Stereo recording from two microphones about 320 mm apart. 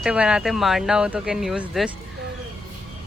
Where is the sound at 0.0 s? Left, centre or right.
Centre.